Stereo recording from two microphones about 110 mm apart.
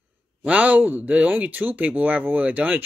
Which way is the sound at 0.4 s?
15° right (ahead or behind).